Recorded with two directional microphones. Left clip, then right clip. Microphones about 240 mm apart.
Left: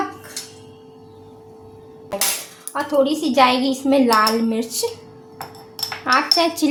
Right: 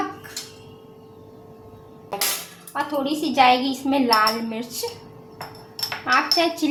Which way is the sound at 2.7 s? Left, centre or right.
Left.